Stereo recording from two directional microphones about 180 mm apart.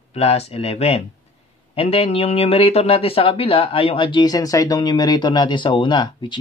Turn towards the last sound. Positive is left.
turn(degrees=25)  # may be behind; listen again after turning